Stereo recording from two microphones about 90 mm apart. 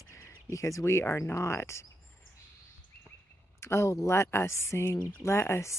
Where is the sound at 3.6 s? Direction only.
30° left (ahead or behind).